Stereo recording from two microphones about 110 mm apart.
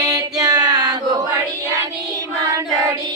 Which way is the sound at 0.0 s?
30° right (ahead or behind).